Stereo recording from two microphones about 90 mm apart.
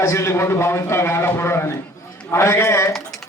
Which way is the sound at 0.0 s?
35° left (ahead or behind).